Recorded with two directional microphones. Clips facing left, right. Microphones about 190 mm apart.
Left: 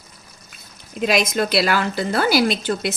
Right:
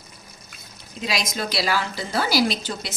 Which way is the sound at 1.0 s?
55° left (ahead or behind).